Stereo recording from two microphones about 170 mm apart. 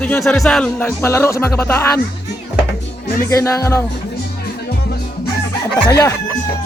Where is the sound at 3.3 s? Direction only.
20° left (ahead or behind).